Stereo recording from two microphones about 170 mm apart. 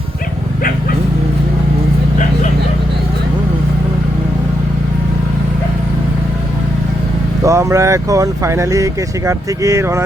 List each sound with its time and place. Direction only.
7.4 s speech: 20° right (ahead or behind)